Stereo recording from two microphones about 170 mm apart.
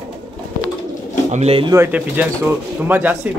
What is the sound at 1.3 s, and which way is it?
Speech, 35° right (ahead or behind).